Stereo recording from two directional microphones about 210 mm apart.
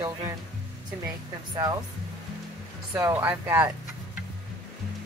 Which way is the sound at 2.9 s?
15° right (ahead or behind).